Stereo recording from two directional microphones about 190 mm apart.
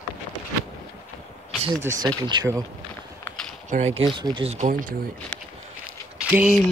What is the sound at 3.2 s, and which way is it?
Mechanisms, 5° left (ahead or behind).